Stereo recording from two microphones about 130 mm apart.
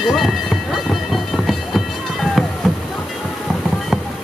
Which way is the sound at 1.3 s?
Centre (ahead or behind).